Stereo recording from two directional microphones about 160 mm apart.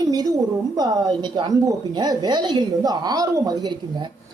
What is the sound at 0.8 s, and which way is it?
Speech, 25° right (ahead or behind).